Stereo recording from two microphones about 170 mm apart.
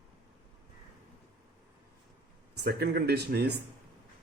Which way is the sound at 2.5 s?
70° right (ahead or behind).